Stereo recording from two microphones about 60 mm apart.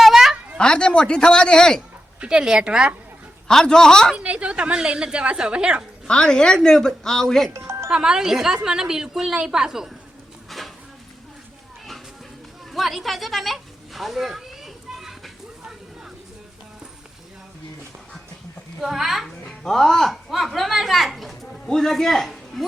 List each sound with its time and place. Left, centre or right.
0.0 s a sound: centre
0.6 s speech: centre
2.2 s speech: centre
3.5 s speech: centre
4.1 s speech: right
6.1 s speech: centre
7.5 s music: right
7.9 s speech: centre
12.7 s cat: centre
18.8 s speech: centre